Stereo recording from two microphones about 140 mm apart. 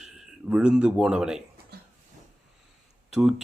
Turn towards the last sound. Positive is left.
turn(degrees=-5)  # may be behind; listen again after turning